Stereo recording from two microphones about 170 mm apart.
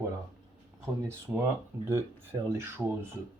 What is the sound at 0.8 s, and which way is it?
Speech, 15° right (ahead or behind).